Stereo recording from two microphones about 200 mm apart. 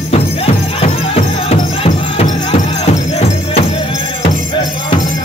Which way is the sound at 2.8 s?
35° left (ahead or behind).